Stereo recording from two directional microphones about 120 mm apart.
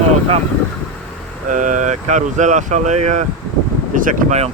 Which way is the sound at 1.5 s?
90° right.